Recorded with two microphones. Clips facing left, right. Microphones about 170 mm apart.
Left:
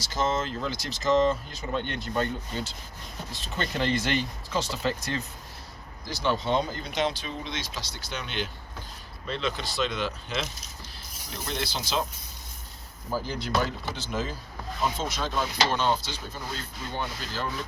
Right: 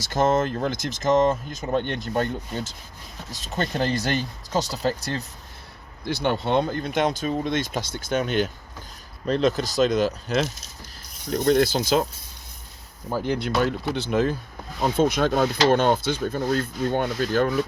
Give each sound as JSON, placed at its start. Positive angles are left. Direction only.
{"t": 0.0, "sound": "speech", "side_deg": -55}
{"t": 6.1, "sound": "speech", "side_deg": -60}
{"t": 13.2, "sound": "speech", "side_deg": -65}